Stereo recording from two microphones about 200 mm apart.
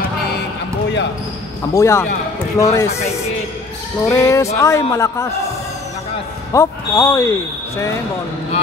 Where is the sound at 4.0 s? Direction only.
15° left (ahead or behind).